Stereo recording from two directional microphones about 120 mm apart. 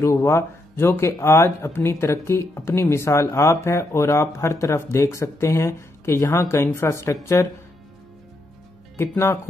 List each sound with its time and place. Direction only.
0.0 s speech: 25° left (ahead or behind)
8.9 s speech: 20° left (ahead or behind)